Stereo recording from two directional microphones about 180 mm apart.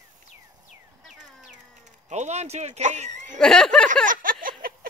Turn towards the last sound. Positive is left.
turn(degrees=-50)  # may be behind; listen again after turning